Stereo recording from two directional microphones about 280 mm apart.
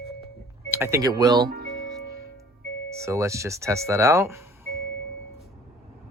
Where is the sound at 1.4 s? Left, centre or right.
Right.